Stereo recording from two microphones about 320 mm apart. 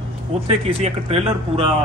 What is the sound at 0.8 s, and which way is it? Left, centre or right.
Speech, centre.